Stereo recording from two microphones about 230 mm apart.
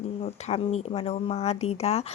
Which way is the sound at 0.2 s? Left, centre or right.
Left.